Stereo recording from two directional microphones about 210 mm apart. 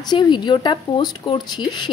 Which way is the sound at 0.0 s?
20° left (ahead or behind).